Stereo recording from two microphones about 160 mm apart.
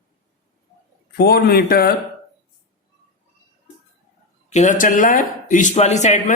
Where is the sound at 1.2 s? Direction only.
75° left (ahead or behind).